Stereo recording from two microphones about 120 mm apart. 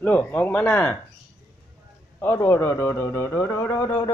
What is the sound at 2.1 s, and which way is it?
A man's voice, 20° left (ahead or behind).